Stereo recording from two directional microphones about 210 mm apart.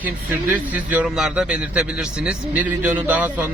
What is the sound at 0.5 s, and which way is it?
A man's voice, 5° right (ahead or behind).